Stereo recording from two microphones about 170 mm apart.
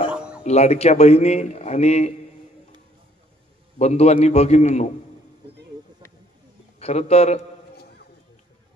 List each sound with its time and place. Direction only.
0.1 s a sound: 5° right (ahead or behind)
0.4 s a man's voice: 40° left (ahead or behind)
3.7 s a man's voice: 40° left (ahead or behind)
6.8 s a man's voice: 40° left (ahead or behind)